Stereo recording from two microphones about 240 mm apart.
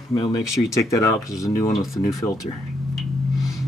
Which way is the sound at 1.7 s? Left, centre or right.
Centre.